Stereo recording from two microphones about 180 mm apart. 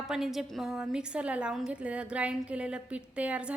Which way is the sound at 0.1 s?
Centre (ahead or behind).